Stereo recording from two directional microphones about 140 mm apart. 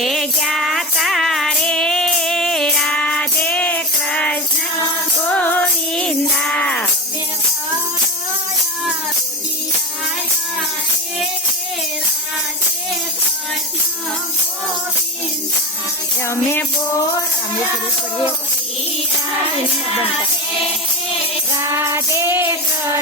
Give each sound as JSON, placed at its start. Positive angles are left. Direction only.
{"t": 0.0, "sound": "music", "side_deg": 0}
{"t": 16.2, "sound": "music", "side_deg": 15}
{"t": 21.6, "sound": "child singing", "side_deg": -20}